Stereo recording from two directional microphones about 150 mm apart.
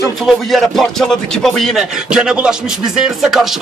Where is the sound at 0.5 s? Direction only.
Centre (ahead or behind).